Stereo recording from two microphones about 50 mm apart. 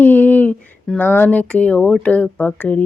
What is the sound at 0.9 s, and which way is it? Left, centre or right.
Speech, centre.